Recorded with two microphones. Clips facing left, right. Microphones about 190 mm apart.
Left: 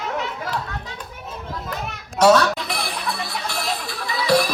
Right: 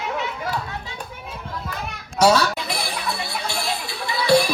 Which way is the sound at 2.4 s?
Centre (ahead or behind).